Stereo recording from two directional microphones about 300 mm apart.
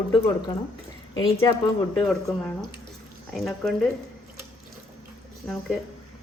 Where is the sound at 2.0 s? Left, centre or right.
Centre.